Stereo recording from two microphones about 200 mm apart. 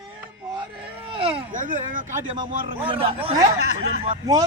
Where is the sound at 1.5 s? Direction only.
40° right (ahead or behind).